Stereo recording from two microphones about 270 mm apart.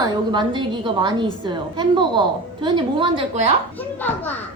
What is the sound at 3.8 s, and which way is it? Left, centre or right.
Speech, centre.